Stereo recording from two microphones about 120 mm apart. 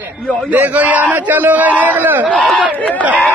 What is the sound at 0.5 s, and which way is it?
Speech, 15° right (ahead or behind).